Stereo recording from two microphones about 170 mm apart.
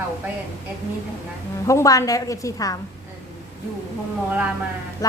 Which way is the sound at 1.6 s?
20° left (ahead or behind).